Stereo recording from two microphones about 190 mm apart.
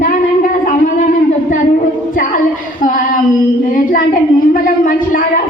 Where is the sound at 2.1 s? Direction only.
45° left (ahead or behind).